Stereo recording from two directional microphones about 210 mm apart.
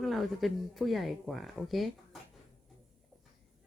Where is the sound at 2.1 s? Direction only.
Centre (ahead or behind).